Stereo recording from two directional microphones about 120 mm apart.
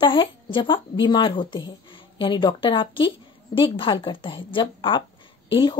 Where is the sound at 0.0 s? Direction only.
45° left (ahead or behind).